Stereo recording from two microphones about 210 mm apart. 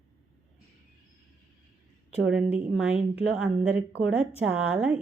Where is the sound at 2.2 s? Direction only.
5° right (ahead or behind).